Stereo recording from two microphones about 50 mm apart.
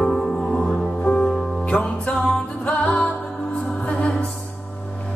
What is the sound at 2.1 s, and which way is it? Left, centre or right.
Music, centre.